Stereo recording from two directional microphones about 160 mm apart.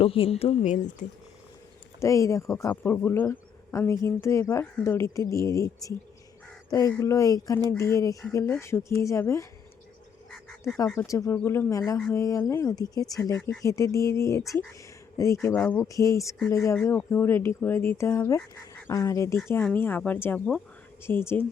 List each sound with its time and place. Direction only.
0.0 s a woman's voice: 35° left (ahead or behind)
2.0 s speech: 20° left (ahead or behind)
11.0 s speech: 20° left (ahead or behind)
15.9 s speech: 20° left (ahead or behind)